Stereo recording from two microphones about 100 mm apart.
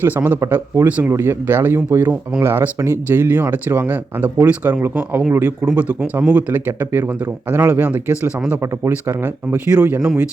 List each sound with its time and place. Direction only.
0.0 s speech: 20° right (ahead or behind)
0.9 s speech: 15° right (ahead or behind)